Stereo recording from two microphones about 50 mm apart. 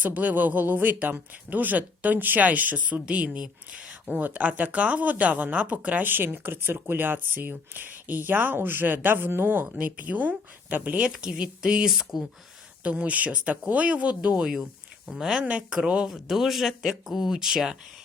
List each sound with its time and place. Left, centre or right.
0.0 s speech: right
3.2 s speech: centre
4.1 s speech: right
6.1 s speech: right
9.8 s speech: right
11.3 s speech: centre
11.9 s speech: centre
12.8 s speech: right
14.2 s speech: centre
15.4 s speech: right
16.0 s speech: centre